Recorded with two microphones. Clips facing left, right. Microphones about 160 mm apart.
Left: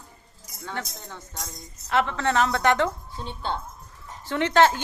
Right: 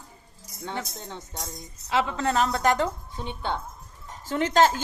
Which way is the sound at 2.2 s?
35° right (ahead or behind).